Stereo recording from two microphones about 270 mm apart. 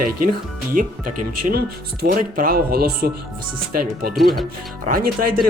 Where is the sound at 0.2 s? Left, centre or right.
Right.